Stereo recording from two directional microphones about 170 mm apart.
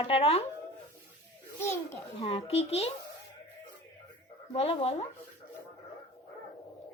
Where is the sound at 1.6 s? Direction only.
15° left (ahead or behind).